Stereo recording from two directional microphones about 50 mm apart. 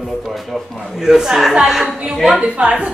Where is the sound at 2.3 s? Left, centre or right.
Right.